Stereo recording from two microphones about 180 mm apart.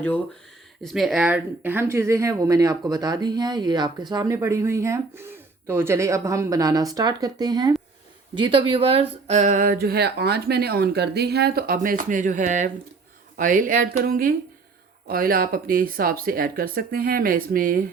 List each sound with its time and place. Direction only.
0.8 s speech: centre (ahead or behind); by 17.8 s 50° right (ahead or behind)